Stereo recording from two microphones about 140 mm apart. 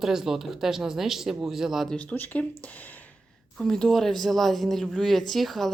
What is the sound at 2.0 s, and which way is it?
Speech, 10° left (ahead or behind).